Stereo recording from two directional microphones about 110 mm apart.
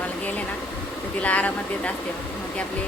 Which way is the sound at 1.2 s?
10° left (ahead or behind).